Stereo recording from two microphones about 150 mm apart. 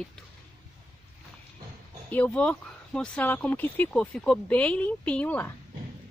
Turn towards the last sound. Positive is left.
turn(degrees=10)  # may be behind; listen again after turning